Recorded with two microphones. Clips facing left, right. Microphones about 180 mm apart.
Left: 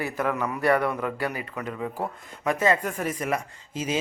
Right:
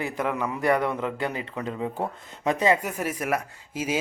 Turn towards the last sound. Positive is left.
turn(degrees=-10)  # may be behind; listen again after turning